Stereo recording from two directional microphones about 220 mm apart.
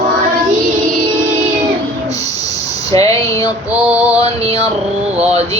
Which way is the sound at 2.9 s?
15° left (ahead or behind).